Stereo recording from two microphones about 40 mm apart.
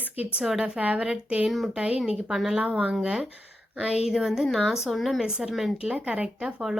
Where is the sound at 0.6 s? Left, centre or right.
Right.